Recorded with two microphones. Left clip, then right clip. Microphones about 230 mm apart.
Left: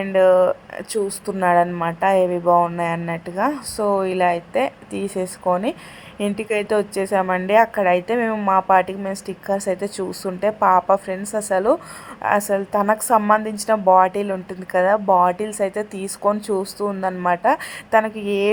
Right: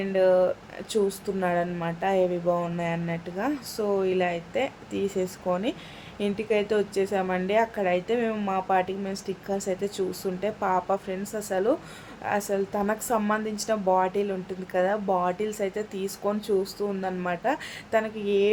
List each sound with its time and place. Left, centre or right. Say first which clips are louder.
0.0 s a woman's voice: left 7 dB; left